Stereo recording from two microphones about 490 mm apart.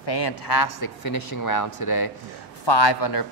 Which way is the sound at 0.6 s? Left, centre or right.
Left.